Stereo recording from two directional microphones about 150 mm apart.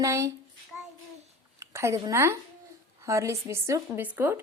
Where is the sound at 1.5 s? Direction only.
20° right (ahead or behind).